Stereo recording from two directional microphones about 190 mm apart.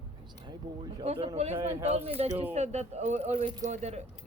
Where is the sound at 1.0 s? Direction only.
30° right (ahead or behind).